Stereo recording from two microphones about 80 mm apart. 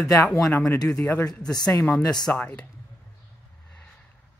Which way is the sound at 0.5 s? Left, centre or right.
Left.